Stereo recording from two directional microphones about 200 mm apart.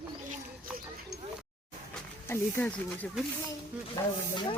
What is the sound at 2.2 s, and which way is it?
Speech, 10° left (ahead or behind).